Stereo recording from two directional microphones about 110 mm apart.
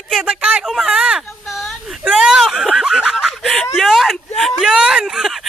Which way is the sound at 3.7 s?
Centre (ahead or behind).